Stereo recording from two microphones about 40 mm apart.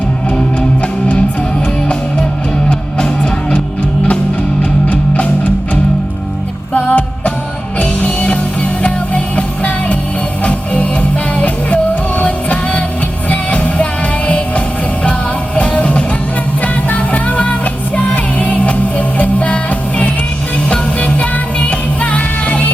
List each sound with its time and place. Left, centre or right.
6.7 s music: left
11.3 s music: left
20.7 s music: left